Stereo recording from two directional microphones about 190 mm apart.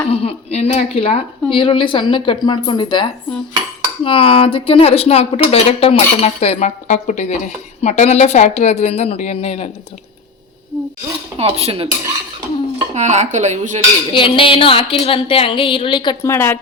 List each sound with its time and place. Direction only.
0.0 s speech: 30° left (ahead or behind)
11.3 s speech: 30° right (ahead or behind)
12.9 s speech: 40° right (ahead or behind)
14.1 s speech: 25° left (ahead or behind)